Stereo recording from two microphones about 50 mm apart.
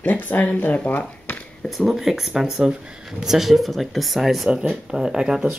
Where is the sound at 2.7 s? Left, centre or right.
Centre.